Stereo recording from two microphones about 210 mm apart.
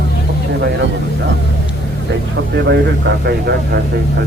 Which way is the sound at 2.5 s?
55° right (ahead or behind).